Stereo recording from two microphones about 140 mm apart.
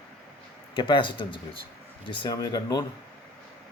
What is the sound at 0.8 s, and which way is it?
Speech, 35° left (ahead or behind).